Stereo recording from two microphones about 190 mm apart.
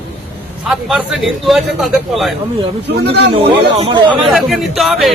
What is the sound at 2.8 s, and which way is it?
Speech, 60° right (ahead or behind).